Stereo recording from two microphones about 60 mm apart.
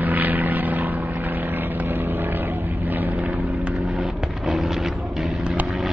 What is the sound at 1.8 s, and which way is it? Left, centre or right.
Vehicle, right.